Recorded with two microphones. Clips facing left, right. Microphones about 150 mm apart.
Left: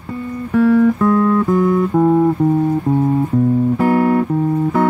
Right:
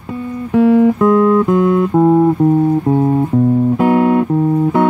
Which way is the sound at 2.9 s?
35° right (ahead or behind).